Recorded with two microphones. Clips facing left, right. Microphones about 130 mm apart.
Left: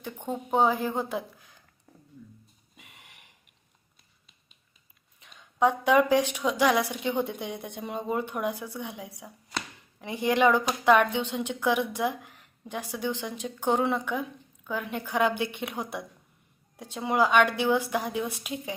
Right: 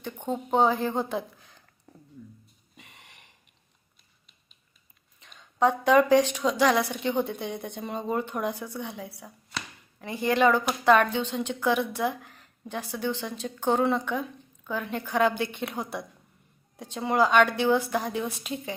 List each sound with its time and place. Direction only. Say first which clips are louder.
0.0 s a woman's voice: right 2 dB; 10° left (ahead or behind)
1.9 s a sound: right 3 dB; centre (ahead or behind)
2.7 s snort: right 2 dB; 5° left (ahead or behind)
5.2 s a woman's voice: even; 10° left (ahead or behind)